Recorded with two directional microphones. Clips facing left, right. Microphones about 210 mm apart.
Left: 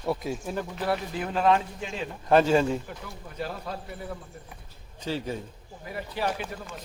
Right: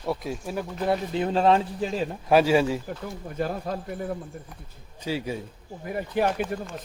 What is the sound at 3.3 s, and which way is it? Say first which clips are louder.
Speech: right 5 dB; 50° right (ahead or behind).